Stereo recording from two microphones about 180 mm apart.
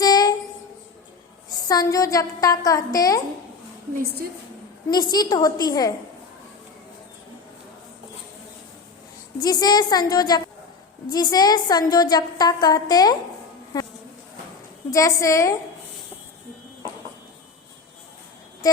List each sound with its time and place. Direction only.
0.0 s child singing: 20° left (ahead or behind)
1.5 s a woman's voice: 20° left (ahead or behind)
4.9 s a woman's voice: 20° left (ahead or behind)
9.4 s a woman's voice: 20° left (ahead or behind)